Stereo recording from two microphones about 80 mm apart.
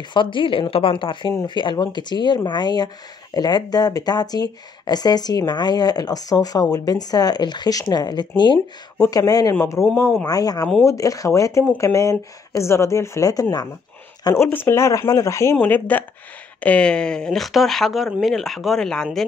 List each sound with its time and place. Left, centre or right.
0.1 s speech: left
1.4 s speech: left
9.0 s speech: left
10.8 s speech: left
14.3 s speech: left
15.6 s speech: left